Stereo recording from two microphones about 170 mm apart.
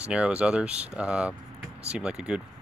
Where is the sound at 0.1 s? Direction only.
5° right (ahead or behind).